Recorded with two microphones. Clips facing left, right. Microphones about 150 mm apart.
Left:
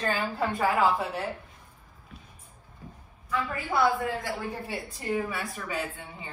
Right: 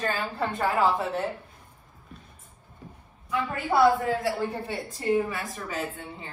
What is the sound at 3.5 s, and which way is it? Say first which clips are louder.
Speech: right 5 dB; 20° right (ahead or behind).